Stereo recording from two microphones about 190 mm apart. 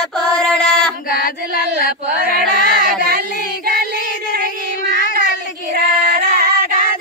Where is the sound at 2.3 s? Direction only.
55° right (ahead or behind).